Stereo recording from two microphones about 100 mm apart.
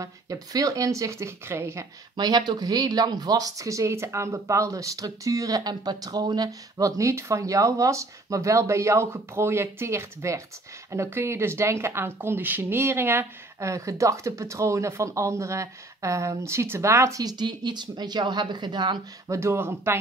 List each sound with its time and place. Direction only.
0.0 s speech: 35° right (ahead or behind)
2.1 s speech: 45° right (ahead or behind); by 17.2 s 30° right (ahead or behind)
17.2 s speech: 45° right (ahead or behind)
19.2 s speech: 30° right (ahead or behind)